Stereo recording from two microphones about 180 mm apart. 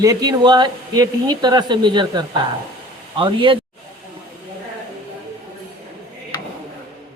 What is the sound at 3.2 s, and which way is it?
Speech, 30° right (ahead or behind).